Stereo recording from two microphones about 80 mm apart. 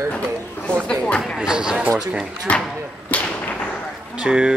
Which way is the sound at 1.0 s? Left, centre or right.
Centre.